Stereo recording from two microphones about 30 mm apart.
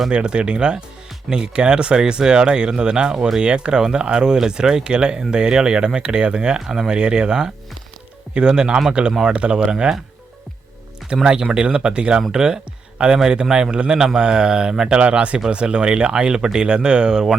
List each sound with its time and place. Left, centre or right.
0.1 s speech: right
11.0 s music: centre
11.5 s speech: right
14.9 s speech: right
15.4 s speech: right